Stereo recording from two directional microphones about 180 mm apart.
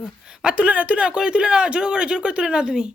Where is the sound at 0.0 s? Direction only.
5° right (ahead or behind).